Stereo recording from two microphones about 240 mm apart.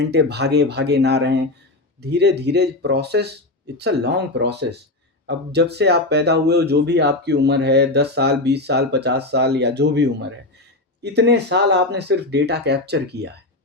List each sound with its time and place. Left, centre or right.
0.0 s speech: right